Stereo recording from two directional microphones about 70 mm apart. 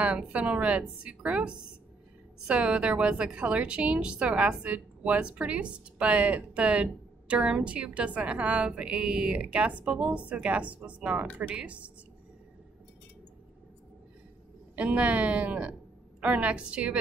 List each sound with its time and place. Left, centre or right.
0.0 s a woman's voice: centre
14.8 s a woman's voice: centre